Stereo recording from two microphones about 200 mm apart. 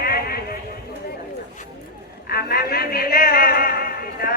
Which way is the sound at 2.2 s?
50° left (ahead or behind).